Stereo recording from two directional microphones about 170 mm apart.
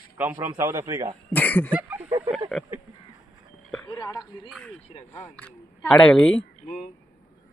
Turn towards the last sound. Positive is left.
turn(degrees=50)  # may be behind; listen again after turning